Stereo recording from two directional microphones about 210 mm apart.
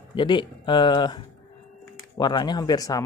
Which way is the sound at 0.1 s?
20° left (ahead or behind).